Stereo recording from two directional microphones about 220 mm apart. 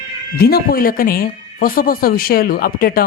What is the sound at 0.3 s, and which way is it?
A woman's voice, 45° left (ahead or behind).